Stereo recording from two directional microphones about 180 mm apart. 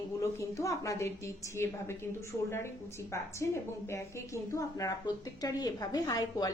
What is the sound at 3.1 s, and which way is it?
A woman's voice, 15° left (ahead or behind).